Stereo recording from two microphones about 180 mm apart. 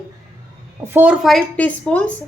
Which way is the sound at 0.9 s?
5° right (ahead or behind).